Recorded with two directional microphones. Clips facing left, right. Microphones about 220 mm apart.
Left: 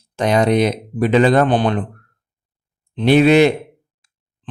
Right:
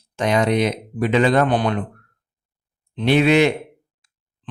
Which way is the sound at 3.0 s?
40° left (ahead or behind).